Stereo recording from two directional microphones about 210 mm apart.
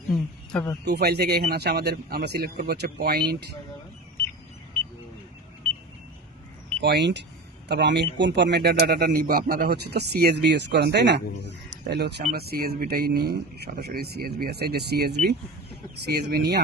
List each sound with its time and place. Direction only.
0.5 s speech: 10° left (ahead or behind)
0.9 s speech: 50° right (ahead or behind)
6.8 s speech: 55° right (ahead or behind)